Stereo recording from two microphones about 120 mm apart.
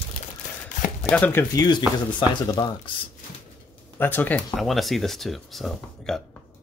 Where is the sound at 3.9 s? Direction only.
15° left (ahead or behind).